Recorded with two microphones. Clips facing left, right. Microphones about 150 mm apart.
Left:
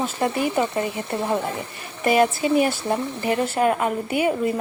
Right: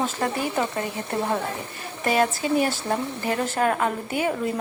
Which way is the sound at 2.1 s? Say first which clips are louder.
Left 4 dB; 10° left (ahead or behind).